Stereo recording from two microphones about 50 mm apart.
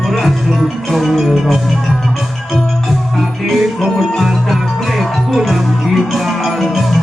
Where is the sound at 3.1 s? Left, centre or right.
Centre.